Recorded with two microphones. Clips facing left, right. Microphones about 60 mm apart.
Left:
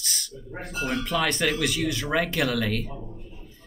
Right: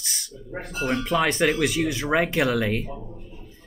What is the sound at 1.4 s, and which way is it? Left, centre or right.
Speech, centre.